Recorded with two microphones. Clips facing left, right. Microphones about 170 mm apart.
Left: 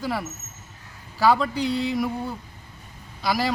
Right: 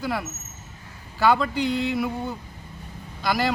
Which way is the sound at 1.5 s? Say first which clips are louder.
Even; 35° left (ahead or behind).